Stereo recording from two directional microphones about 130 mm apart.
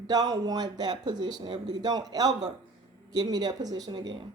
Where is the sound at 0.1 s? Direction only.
30° right (ahead or behind).